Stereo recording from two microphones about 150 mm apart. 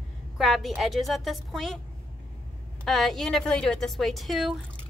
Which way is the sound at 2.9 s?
Centre (ahead or behind).